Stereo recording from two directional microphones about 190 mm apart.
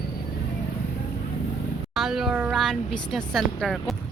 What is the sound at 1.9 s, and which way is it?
A woman's voice, centre (ahead or behind).